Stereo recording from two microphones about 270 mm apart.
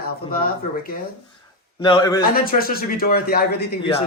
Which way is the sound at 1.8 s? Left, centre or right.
Centre.